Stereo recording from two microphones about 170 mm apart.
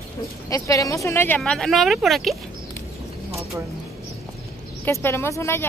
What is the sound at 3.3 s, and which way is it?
Bird, 15° right (ahead or behind).